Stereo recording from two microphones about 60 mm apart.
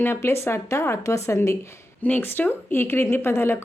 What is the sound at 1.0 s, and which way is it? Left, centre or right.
Speech, left.